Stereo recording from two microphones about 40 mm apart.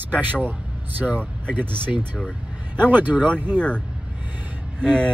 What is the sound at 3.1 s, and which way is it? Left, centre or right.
Speech, left.